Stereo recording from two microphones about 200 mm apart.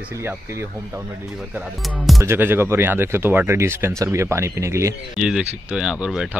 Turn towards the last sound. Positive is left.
turn(degrees=-5)  # may be behind; listen again after turning